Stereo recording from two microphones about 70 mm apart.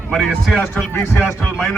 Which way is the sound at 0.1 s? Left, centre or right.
Centre.